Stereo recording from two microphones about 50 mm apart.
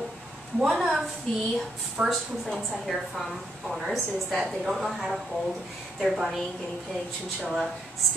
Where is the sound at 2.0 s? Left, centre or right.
Centre.